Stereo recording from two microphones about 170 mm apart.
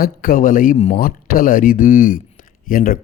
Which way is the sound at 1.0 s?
55° left (ahead or behind).